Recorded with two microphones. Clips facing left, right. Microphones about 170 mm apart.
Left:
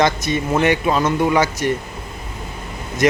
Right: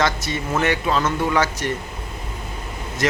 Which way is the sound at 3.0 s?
15° left (ahead or behind).